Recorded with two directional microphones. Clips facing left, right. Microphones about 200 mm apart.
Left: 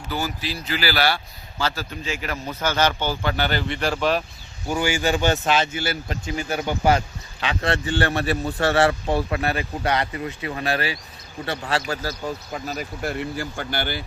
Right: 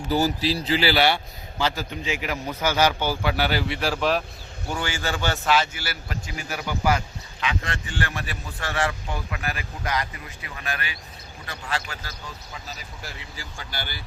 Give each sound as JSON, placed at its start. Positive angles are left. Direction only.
{"t": 0.1, "sound": "a man's voice", "side_deg": -35}
{"t": 4.7, "sound": "speech", "side_deg": 10}